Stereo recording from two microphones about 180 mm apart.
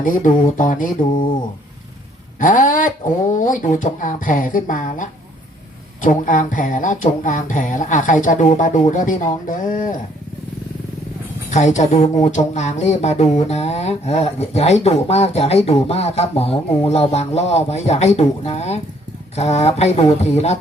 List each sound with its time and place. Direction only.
0.0 s speech: 45° left (ahead or behind)
1.1 s speech: 25° left (ahead or behind)
2.4 s speech: 45° left (ahead or behind)
11.5 s speech: 40° left (ahead or behind)